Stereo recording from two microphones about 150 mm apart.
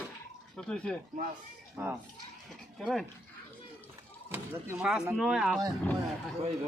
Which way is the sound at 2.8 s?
Centre (ahead or behind).